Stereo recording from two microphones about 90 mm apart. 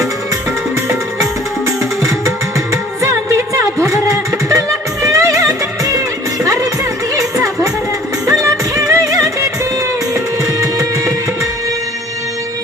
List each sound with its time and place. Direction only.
3.0 s music: 30° right (ahead or behind)
3.9 s a sound: 35° right (ahead or behind)
5.0 s music: 35° right (ahead or behind)
8.3 s music: 40° right (ahead or behind)